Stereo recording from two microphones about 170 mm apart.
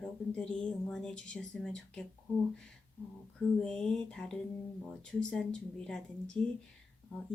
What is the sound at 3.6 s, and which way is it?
Speech, 5° left (ahead or behind).